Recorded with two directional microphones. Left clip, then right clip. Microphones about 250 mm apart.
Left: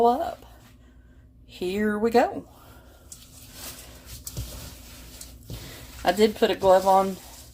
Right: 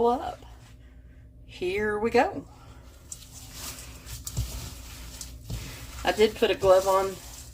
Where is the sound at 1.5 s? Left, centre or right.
Left.